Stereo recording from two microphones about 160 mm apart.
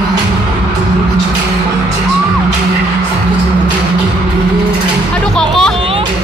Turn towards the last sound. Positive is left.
turn(degrees=5)  # may be behind; listen again after turning